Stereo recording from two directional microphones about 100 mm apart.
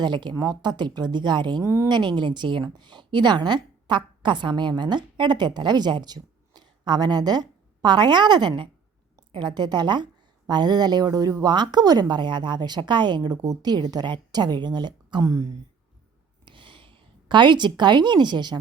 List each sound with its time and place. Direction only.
0.0 s a woman's voice: 50° right (ahead or behind)
1.6 s speech: 30° right (ahead or behind)
1.9 s a woman's voice: 50° right (ahead or behind)
15.2 s speech: 35° right (ahead or behind)
16.5 s a woman's voice: 55° right (ahead or behind)